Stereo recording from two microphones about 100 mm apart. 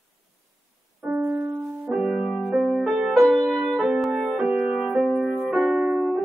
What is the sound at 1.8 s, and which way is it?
Music, 5° right (ahead or behind).